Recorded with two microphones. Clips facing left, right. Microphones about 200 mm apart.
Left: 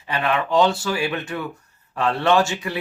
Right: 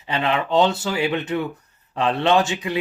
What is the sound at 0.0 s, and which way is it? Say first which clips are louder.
Speech: even; 20° right (ahead or behind).